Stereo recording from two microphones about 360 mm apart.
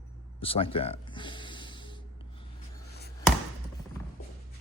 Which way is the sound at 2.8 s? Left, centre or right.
Left.